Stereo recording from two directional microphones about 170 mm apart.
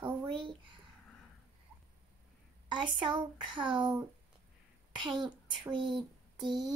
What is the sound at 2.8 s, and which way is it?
Speech, 30° right (ahead or behind).